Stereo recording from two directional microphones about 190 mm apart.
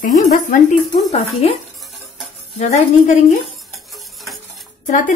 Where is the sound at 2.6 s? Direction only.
35° left (ahead or behind).